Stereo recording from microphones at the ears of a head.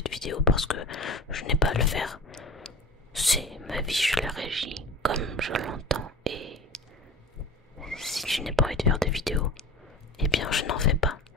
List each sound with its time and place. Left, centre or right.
0.0 s speech: left
3.1 s whispering: centre
4.6 s speech: right
7.8 s whispering: centre
8.9 s speech: centre
10.4 s speech: left